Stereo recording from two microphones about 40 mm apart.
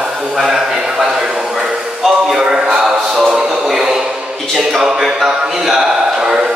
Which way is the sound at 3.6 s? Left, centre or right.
Centre.